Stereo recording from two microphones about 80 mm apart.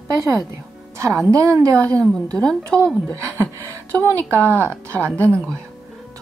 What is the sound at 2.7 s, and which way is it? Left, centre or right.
Speech, centre.